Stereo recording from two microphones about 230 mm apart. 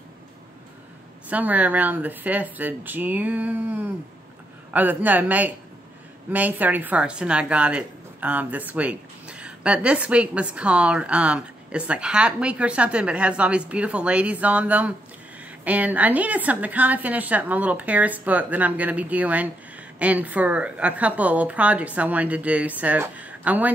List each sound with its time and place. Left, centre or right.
1.3 s a woman's voice: centre